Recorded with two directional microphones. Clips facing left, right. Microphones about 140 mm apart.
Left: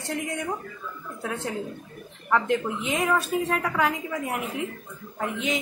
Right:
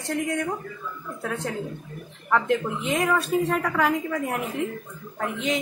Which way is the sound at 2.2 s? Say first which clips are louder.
Right 1 dB; centre (ahead or behind).